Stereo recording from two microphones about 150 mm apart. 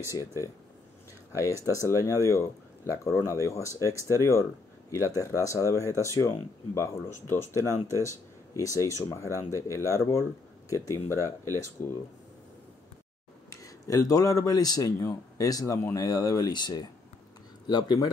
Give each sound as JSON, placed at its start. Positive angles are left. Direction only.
{"t": 0.1, "sound": "speech", "side_deg": 20}
{"t": 13.5, "sound": "speech", "side_deg": 20}